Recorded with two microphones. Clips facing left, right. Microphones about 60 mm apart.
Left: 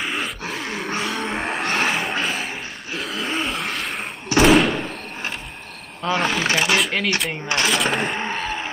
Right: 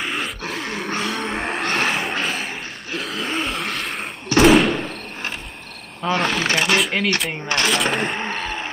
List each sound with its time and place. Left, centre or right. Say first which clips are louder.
0.0 s grunt: even; centre
1.0 s a sound: even; centre
4.4 s door: right 1 dB; centre
6.0 s speech: even; centre